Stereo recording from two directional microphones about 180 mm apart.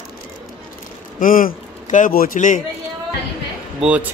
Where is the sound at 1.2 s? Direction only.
50° left (ahead or behind).